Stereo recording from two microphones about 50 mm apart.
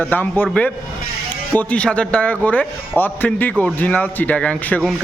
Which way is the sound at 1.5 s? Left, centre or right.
Left.